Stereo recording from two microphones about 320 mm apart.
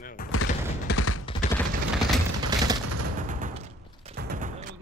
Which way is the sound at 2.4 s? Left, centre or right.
Centre.